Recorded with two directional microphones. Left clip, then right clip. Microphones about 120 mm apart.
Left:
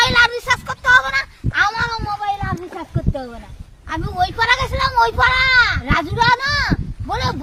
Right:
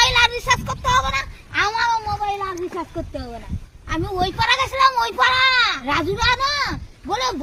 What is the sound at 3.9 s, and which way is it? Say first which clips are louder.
A child's voice: left 2 dB; 25° left (ahead or behind).